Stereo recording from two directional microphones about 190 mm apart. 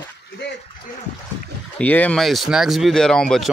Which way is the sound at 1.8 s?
10° left (ahead or behind).